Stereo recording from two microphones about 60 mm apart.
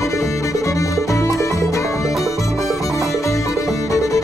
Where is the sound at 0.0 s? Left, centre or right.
Left.